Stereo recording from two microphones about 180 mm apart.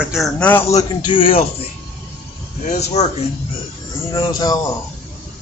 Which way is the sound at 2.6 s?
40° left (ahead or behind).